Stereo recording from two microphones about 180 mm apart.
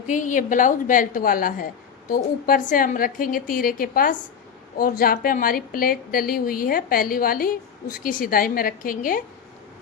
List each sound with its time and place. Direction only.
0.1 s a woman's voice: 45° left (ahead or behind)